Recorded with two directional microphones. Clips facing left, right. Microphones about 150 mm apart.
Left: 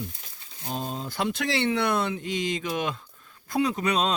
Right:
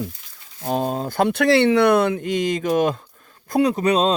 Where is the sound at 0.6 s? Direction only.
60° right (ahead or behind).